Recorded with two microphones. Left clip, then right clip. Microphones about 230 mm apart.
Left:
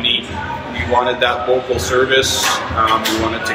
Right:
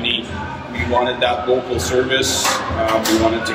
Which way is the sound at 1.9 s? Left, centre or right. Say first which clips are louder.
Left 4 dB; centre.